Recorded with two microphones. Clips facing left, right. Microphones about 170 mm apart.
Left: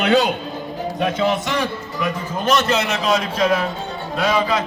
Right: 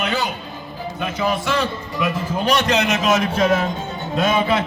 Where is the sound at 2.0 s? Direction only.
10° right (ahead or behind).